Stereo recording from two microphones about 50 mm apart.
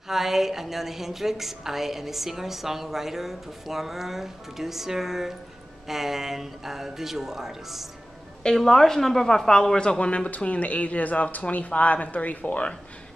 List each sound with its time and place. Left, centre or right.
0.1 s a woman's voice: centre
8.5 s a woman's voice: centre; by 12.7 s left